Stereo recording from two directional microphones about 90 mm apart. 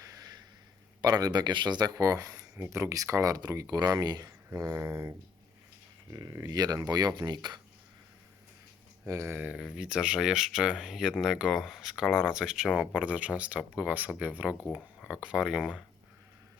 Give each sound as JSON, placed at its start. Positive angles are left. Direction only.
{"t": 0.0, "sound": "a sound", "side_deg": -40}
{"t": 1.0, "sound": "speech", "side_deg": -45}
{"t": 4.9, "sound": "speech", "side_deg": -30}
{"t": 6.1, "sound": "speech", "side_deg": -45}
{"t": 9.0, "sound": "speech", "side_deg": -25}
{"t": 9.5, "sound": "speech", "side_deg": -10}